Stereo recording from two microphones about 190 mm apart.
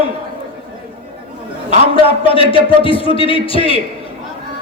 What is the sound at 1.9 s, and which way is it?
A man's voice, 30° left (ahead or behind).